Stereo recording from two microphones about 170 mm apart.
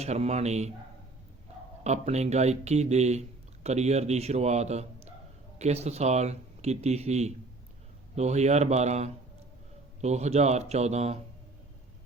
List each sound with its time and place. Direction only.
0.0 s speech: 40° right (ahead or behind)
1.8 s speech: 40° right (ahead or behind)